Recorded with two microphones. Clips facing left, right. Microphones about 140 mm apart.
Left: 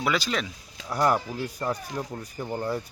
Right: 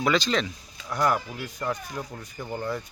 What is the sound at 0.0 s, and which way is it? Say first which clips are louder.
Speech: right 3 dB; 5° left (ahead or behind).